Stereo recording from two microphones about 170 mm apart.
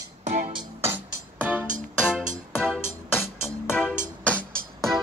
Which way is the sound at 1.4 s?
10° right (ahead or behind).